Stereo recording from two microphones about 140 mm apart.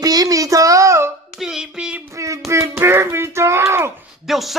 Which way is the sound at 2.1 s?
20° right (ahead or behind).